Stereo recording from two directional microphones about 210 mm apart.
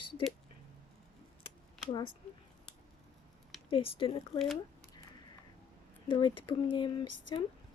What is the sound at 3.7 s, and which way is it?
Speech, 25° left (ahead or behind).